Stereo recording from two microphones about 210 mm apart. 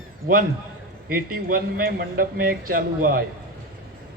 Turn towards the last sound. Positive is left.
turn(degrees=-45)  # may be behind; listen again after turning